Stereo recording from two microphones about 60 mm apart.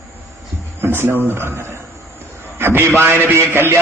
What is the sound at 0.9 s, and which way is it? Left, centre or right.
Speech, right.